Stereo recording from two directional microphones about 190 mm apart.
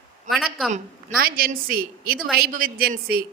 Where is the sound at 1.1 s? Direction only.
50° right (ahead or behind).